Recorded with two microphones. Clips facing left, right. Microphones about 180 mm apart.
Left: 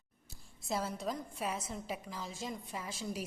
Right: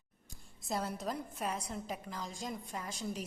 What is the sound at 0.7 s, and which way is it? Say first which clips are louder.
A woman's voice: even; centre (ahead or behind).